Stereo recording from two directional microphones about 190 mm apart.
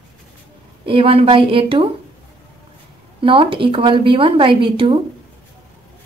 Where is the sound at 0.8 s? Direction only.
30° right (ahead or behind).